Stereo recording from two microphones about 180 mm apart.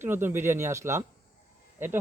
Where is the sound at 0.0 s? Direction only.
10° right (ahead or behind).